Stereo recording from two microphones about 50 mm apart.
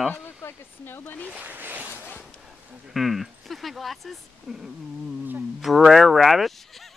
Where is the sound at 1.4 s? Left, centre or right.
Right.